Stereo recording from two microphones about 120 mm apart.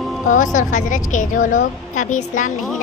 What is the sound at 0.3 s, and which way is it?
A woman's voice, 90° left.